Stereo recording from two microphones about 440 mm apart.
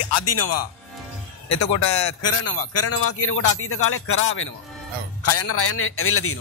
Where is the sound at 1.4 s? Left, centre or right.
Left.